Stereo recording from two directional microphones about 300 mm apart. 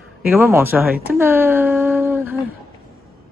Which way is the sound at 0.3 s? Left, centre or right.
Centre.